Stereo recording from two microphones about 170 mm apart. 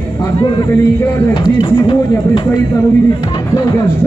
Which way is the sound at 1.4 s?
30° left (ahead or behind).